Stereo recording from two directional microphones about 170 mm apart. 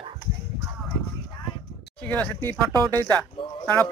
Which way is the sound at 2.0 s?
10° left (ahead or behind).